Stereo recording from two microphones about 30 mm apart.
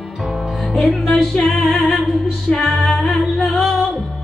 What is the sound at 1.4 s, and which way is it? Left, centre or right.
Music, left.